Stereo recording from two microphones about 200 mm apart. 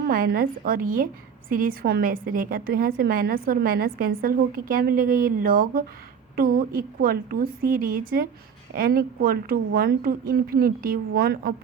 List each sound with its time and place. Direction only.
0.1 s a woman's voice: 45° right (ahead or behind)